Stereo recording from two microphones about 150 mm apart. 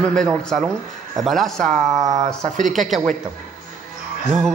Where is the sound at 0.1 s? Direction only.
5° left (ahead or behind).